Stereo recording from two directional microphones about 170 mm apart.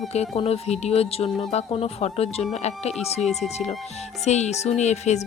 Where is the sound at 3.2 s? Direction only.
Centre (ahead or behind).